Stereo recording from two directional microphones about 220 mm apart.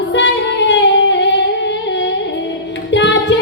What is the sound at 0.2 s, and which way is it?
Music, 55° left (ahead or behind).